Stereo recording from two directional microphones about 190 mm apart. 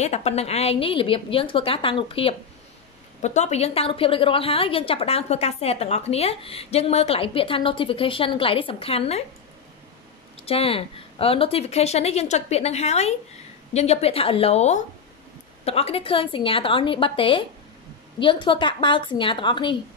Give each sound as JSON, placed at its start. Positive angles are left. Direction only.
{"t": 0.0, "sound": "a woman's voice", "side_deg": 35}
{"t": 10.3, "sound": "a woman's voice", "side_deg": 30}